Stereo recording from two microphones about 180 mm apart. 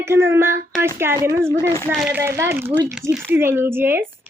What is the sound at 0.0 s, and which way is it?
Speech, 15° right (ahead or behind).